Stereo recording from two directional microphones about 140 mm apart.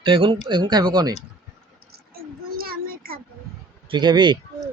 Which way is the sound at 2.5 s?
90° right.